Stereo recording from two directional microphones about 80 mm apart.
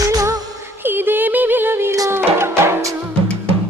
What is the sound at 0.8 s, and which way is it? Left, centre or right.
Music, right.